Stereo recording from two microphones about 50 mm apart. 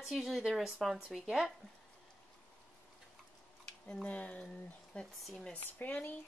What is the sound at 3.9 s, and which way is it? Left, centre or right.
A woman's voice, left.